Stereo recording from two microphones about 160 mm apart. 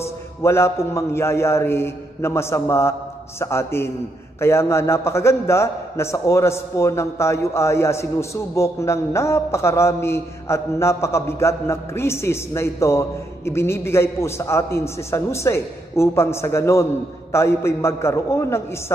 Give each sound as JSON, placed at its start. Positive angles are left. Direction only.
{"t": 0.0, "sound": "a man's voice", "side_deg": 15}